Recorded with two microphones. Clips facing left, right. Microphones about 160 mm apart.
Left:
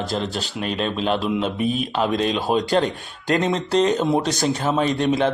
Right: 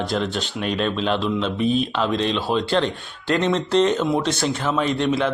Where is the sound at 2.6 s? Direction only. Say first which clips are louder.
Left 1 dB; 40° left (ahead or behind).